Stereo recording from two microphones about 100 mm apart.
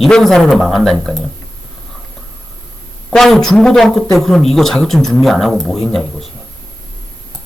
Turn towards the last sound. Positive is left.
turn(degrees=0)  # may be behind; listen again after turning